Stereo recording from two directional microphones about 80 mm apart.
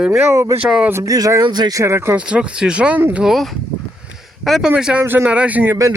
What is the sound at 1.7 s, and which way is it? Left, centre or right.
Speech, right.